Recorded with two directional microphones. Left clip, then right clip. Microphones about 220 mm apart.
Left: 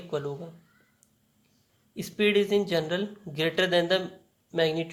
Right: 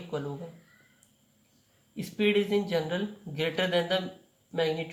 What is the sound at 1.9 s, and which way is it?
Speech, 40° left (ahead or behind).